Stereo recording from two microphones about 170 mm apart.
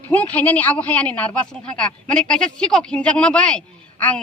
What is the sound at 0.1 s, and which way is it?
A woman's voice, 10° left (ahead or behind).